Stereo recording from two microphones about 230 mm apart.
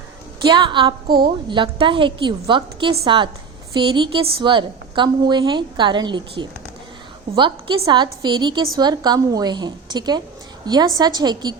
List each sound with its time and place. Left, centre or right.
0.4 s a woman's voice: centre
1.0 s a woman's voice: right
1.5 s a woman's voice: right